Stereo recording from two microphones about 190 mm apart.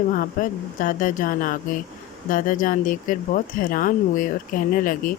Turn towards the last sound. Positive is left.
turn(degrees=45)  # may be behind; listen again after turning